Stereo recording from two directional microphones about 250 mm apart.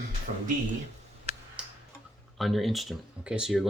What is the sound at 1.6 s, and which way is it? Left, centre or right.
Tick-tock, centre.